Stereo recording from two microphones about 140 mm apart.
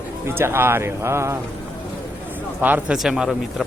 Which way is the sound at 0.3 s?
15° right (ahead or behind).